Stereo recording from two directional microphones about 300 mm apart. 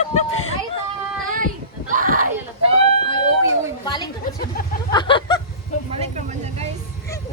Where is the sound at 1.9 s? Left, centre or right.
Right.